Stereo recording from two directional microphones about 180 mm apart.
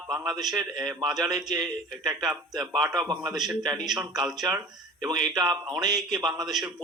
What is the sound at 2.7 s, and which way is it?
A man's voice, centre (ahead or behind).